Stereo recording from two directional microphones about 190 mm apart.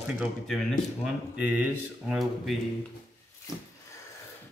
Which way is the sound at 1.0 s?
5° right (ahead or behind).